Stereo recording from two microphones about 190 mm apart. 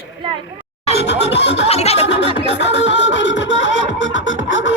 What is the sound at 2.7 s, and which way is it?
Music, 75° left (ahead or behind).